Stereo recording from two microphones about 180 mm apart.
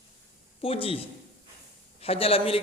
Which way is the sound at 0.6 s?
30° left (ahead or behind).